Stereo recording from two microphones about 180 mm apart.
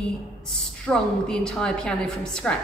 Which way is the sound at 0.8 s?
5° left (ahead or behind).